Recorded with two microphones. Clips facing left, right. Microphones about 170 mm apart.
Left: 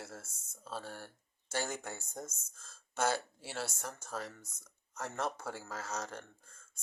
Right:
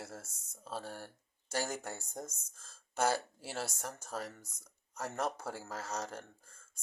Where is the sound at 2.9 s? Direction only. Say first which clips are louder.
Right 1 dB; 35° right (ahead or behind).